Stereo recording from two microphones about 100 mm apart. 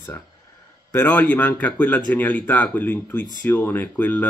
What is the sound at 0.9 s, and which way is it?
Speech, 15° left (ahead or behind).